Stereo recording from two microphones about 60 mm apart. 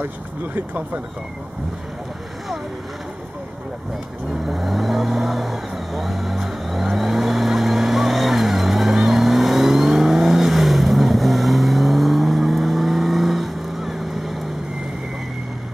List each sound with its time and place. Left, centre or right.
0.6 s speech: right
4.3 s vehicle: centre